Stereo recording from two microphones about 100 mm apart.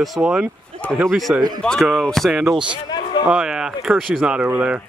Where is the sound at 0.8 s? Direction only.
15° left (ahead or behind).